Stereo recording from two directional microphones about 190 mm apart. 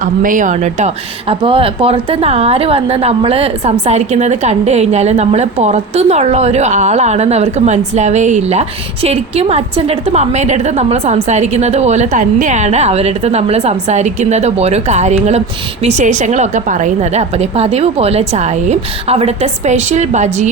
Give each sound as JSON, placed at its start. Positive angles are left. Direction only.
{"t": 0.0, "sound": "speech", "side_deg": -45}